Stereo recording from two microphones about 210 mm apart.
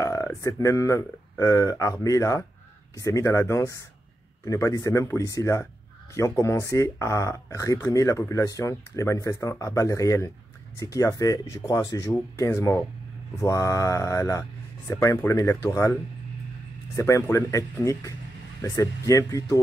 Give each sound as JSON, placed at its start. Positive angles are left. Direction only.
{"t": 0.0, "sound": "speech", "side_deg": 15}
{"t": 16.9, "sound": "speech", "side_deg": 15}